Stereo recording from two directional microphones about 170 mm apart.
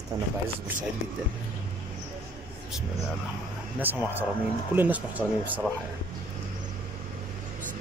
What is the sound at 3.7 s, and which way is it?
Speech, 10° right (ahead or behind).